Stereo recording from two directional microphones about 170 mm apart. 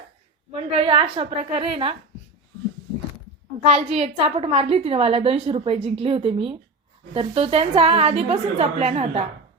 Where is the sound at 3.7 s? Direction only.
35° right (ahead or behind).